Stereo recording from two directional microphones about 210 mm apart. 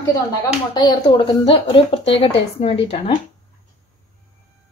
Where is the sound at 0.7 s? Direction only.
20° left (ahead or behind).